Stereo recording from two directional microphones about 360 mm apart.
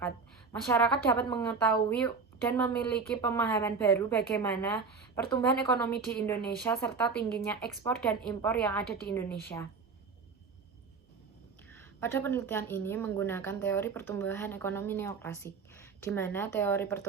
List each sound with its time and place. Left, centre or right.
0.5 s a woman's voice: centre
11.7 s a woman's voice: centre